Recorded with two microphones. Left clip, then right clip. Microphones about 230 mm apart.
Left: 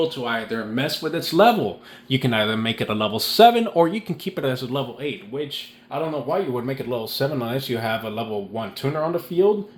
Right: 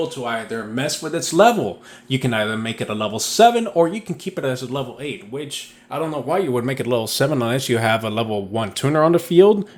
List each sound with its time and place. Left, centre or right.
0.0 s speech: centre
5.9 s speech: right